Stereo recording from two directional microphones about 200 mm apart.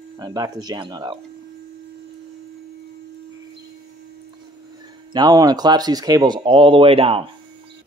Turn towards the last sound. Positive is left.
turn(degrees=-30)  # may be behind; listen again after turning